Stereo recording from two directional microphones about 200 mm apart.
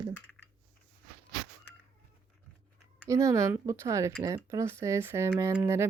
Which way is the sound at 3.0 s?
15° right (ahead or behind).